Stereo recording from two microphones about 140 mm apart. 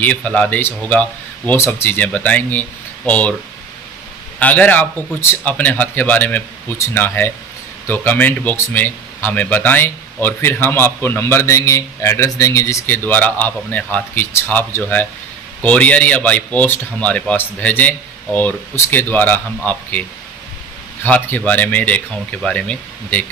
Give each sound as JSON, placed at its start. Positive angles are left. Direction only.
{"t": 0.0, "sound": "speech", "side_deg": 10}
{"t": 4.4, "sound": "speech", "side_deg": 10}